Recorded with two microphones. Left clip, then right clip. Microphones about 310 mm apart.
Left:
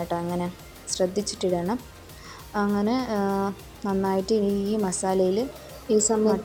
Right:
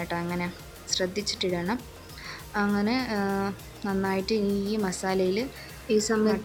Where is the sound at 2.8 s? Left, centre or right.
Centre.